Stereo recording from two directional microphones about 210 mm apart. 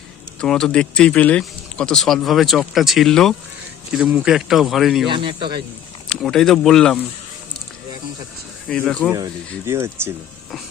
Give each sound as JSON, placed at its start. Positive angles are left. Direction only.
{"t": 0.4, "sound": "speech", "side_deg": 5}
{"t": 5.0, "sound": "speech", "side_deg": -25}
{"t": 6.1, "sound": "speech", "side_deg": 5}
{"t": 8.6, "sound": "speech", "side_deg": 5}
{"t": 9.0, "sound": "speech", "side_deg": -15}